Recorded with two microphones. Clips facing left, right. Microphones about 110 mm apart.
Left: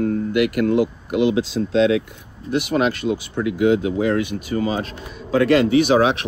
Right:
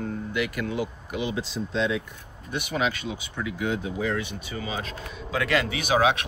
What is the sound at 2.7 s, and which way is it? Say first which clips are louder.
Speech: left 7 dB; 55° left (ahead or behind).